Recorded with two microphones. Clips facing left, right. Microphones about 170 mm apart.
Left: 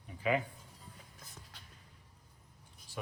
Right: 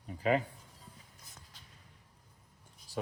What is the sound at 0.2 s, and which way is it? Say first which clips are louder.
Speech: right 3 dB; 35° right (ahead or behind).